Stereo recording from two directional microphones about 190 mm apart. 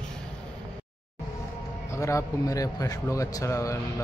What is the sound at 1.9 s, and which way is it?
A man's voice, 15° left (ahead or behind).